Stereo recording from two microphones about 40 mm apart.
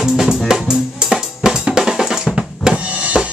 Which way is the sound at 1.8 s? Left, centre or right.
Centre.